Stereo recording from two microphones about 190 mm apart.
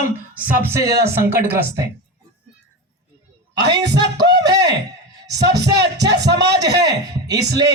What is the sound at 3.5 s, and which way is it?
Speech, 60° right (ahead or behind).